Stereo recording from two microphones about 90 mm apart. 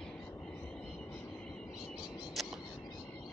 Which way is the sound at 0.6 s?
10° left (ahead or behind).